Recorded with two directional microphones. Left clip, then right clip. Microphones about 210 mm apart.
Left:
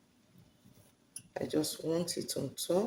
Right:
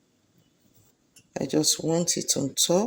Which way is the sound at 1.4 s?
45° right (ahead or behind).